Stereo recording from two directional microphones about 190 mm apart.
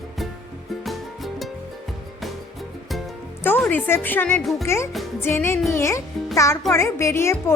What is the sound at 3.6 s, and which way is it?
A child's voice, 10° left (ahead or behind).